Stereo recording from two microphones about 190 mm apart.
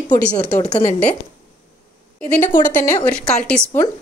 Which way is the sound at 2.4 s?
45° left (ahead or behind).